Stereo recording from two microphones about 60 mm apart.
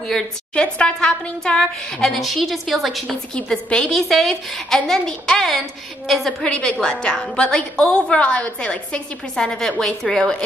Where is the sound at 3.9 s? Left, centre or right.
Centre.